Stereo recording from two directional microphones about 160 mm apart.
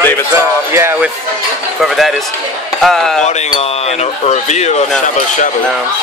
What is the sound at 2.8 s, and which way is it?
Speech, centre (ahead or behind).